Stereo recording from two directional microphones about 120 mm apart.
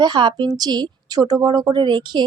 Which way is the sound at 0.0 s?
40° right (ahead or behind).